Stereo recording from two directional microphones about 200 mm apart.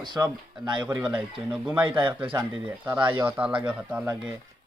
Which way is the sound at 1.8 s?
25° right (ahead or behind).